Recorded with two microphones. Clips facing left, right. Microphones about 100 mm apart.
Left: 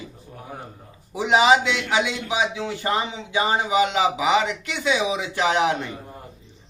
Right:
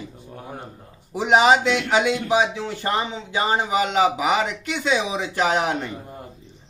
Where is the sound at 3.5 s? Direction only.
40° right (ahead or behind).